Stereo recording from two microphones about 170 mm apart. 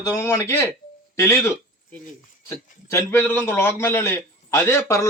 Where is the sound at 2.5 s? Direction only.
15° left (ahead or behind).